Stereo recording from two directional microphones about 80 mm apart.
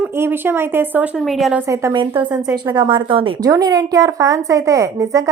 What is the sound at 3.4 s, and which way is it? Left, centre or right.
A woman's voice, right.